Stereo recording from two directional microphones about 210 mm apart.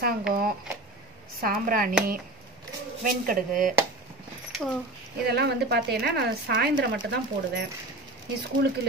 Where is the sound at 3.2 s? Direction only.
40° right (ahead or behind).